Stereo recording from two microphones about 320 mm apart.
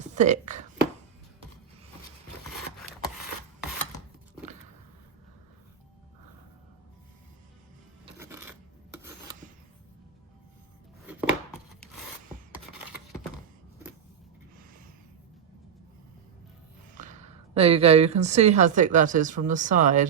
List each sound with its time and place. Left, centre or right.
0.1 s a sound: right
8.2 s filing: centre
11.0 s chopping: centre
17.0 s speech: right